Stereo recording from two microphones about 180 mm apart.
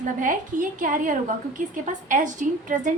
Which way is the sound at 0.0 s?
45° right (ahead or behind).